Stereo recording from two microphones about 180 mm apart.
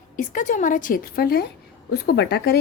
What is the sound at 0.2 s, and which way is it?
A woman's voice, 45° left (ahead or behind).